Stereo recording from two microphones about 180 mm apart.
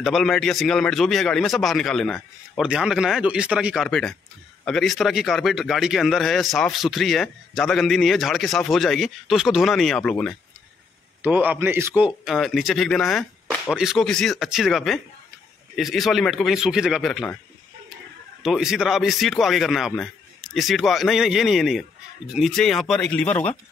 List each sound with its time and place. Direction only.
0.0 s a man's voice: centre (ahead or behind)
11.2 s a man's voice: 10° right (ahead or behind)
18.4 s a man's voice: 5° right (ahead or behind)